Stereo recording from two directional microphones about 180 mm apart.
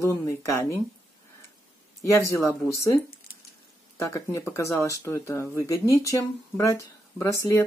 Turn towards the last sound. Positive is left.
turn(degrees=15)  # may be behind; listen again after turning